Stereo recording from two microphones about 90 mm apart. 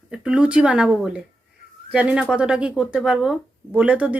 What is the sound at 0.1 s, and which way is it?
Speech, 10° right (ahead or behind).